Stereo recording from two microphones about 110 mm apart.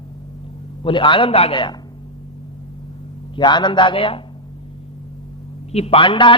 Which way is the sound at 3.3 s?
45° left (ahead or behind).